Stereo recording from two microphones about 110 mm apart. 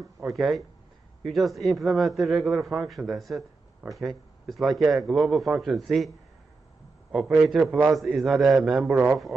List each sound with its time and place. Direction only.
0.3 s a man's voice: centre (ahead or behind)
3.8 s speech: 10° right (ahead or behind)
4.5 s a man's voice: centre (ahead or behind)